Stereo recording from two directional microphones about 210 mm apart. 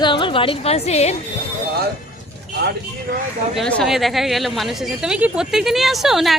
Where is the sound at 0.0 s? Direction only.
25° left (ahead or behind).